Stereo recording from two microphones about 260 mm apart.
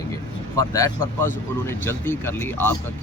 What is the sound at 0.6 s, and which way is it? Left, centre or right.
Speech, centre.